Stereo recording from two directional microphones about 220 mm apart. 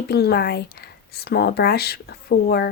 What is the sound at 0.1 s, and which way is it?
Speech, 45° left (ahead or behind).